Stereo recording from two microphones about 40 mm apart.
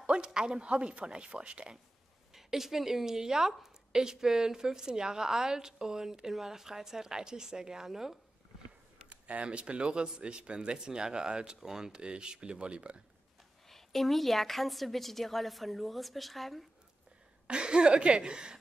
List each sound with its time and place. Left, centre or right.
0.0 s speech: right
2.3 s a woman's voice: centre
9.1 s speech: right
13.7 s a woman's voice: centre
17.5 s speech: right